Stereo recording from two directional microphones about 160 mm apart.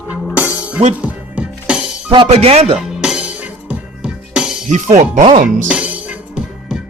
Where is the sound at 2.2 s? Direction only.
40° right (ahead or behind).